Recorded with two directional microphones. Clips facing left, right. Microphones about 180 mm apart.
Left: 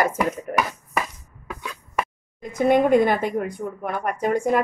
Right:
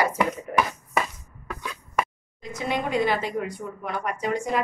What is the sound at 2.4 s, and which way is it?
A woman's voice, 55° left (ahead or behind).